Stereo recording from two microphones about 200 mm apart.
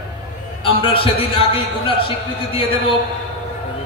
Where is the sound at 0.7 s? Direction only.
25° left (ahead or behind).